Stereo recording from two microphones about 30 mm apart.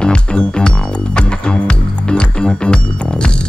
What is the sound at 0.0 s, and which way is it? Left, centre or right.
Music, left.